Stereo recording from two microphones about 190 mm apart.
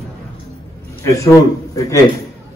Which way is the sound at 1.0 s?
15° left (ahead or behind).